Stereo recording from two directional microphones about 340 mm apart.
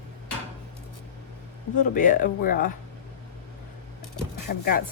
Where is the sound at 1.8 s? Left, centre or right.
Left.